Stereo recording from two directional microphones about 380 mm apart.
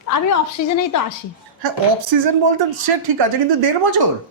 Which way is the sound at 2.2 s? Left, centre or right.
Right.